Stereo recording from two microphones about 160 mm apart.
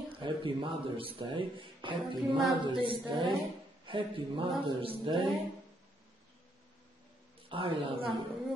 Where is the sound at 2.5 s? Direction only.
30° right (ahead or behind).